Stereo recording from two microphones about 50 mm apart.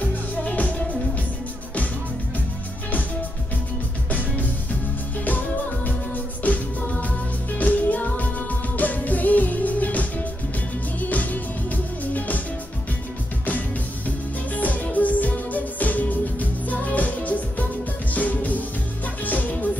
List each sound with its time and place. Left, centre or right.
0.4 s music: left
4.1 s music: left
5.9 s music: left
13.5 s music: left